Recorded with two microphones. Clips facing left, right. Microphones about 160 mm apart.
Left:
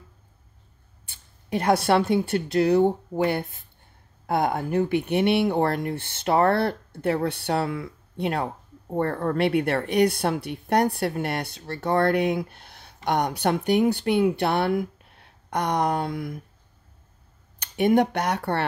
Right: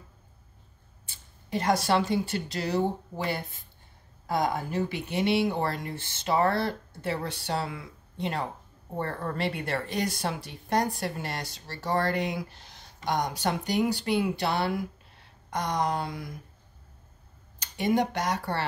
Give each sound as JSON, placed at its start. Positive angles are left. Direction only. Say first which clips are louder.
{"t": 1.0, "sound": "a woman's voice", "louder": "even", "side_deg": 60}
{"t": 17.6, "sound": "speech", "louder": "left 6 dB", "side_deg": 60}